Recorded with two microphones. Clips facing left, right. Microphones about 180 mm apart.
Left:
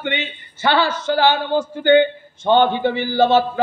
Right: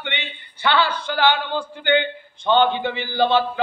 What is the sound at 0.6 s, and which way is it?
A man's voice, 45° left (ahead or behind).